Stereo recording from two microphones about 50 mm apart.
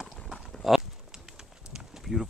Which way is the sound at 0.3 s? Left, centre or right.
Centre.